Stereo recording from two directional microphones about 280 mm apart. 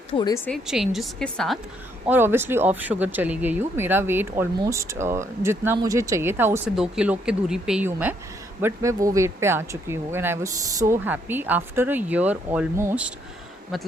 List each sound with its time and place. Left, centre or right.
0.1 s speech: centre
0.4 s a woman's voice: centre